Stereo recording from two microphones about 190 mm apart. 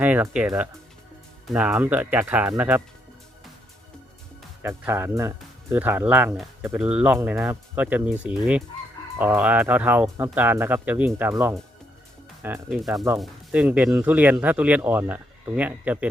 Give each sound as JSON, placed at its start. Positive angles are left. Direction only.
{"t": 0.0, "sound": "speech", "side_deg": -5}
{"t": 4.6, "sound": "speech", "side_deg": -15}